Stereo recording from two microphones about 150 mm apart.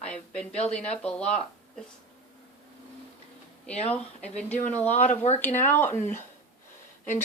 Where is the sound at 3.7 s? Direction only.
45° left (ahead or behind).